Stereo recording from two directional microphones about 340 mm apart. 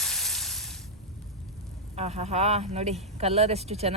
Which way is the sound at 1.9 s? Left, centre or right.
Centre.